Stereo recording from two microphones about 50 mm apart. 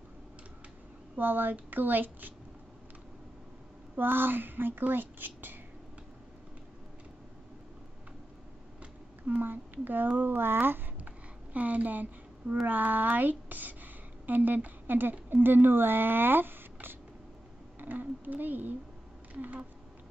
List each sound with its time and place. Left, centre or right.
1.1 s speech: right
3.9 s speech: right
9.4 s speech: right
11.5 s a woman's voice: right